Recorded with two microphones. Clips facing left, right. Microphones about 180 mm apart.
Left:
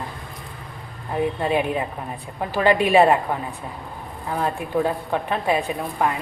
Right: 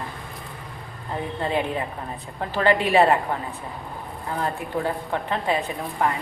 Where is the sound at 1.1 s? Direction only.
15° left (ahead or behind).